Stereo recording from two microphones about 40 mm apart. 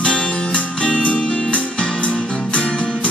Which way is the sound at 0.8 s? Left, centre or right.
Left.